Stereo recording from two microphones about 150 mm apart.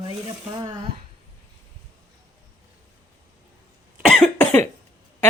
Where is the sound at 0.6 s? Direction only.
30° right (ahead or behind).